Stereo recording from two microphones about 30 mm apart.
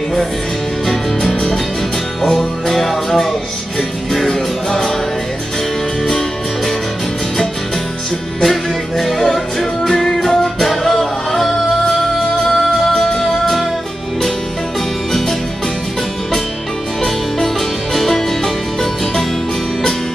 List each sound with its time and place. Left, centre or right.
2.3 s music: centre
8.4 s music: centre
17.0 s music: centre